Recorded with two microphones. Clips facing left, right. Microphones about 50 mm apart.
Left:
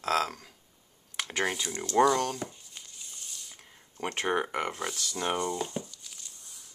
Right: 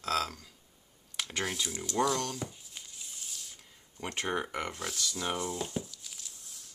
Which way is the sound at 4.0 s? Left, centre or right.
Left.